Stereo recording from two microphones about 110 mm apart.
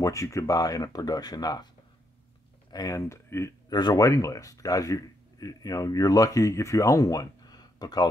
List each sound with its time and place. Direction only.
0.0 s speech: 30° left (ahead or behind)
2.7 s speech: 35° left (ahead or behind)
3.7 s speech: 35° left (ahead or behind)